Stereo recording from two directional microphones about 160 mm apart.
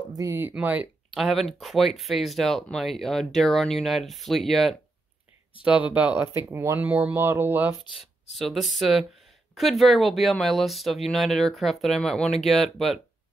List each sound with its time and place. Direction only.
0.1 s speech: 20° right (ahead or behind)
8.0 s speech: centre (ahead or behind)